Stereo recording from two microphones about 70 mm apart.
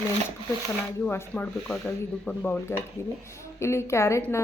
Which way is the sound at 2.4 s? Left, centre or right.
Left.